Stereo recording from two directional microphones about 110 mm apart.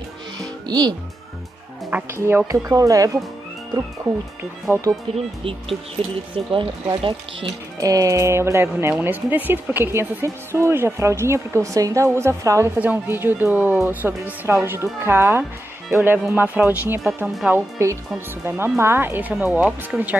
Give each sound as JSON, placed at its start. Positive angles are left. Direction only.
{"t": 0.7, "sound": "speech", "side_deg": -40}
{"t": 2.1, "sound": "a woman's voice", "side_deg": -25}
{"t": 5.1, "sound": "speech", "side_deg": -55}
{"t": 6.0, "sound": "speech", "side_deg": -70}
{"t": 6.3, "sound": "speech", "side_deg": -50}
{"t": 7.8, "sound": "a woman's voice", "side_deg": -30}